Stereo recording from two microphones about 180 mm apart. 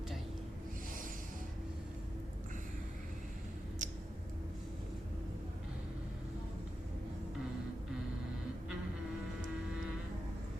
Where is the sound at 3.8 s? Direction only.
45° right (ahead or behind).